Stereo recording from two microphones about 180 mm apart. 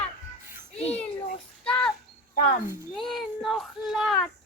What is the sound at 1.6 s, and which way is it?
Speech, 5° left (ahead or behind).